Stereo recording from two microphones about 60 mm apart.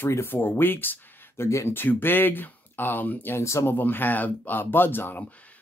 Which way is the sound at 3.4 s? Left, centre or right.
Left.